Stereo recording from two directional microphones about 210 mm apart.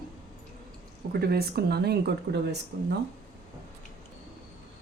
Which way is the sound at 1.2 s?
50° right (ahead or behind).